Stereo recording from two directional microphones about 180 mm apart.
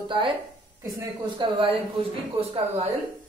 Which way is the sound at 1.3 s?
30° right (ahead or behind).